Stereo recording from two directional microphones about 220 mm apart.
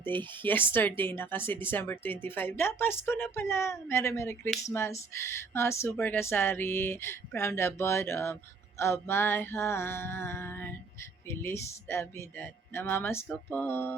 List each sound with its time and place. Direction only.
0.4 s speech: 10° left (ahead or behind)